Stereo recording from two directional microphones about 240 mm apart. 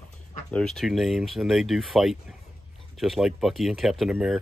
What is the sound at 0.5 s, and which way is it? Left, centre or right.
Speech, centre.